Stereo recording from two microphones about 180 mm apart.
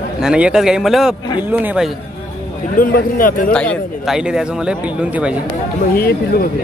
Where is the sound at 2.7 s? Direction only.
50° left (ahead or behind).